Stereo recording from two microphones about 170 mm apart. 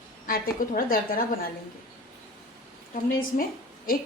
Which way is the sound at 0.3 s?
55° left (ahead or behind).